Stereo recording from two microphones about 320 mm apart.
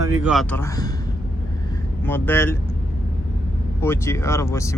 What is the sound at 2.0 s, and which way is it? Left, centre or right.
Speech, centre.